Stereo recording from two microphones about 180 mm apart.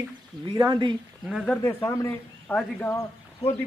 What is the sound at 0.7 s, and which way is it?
Speech, 25° right (ahead or behind).